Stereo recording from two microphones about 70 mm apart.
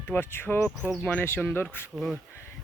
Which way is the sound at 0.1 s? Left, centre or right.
Left.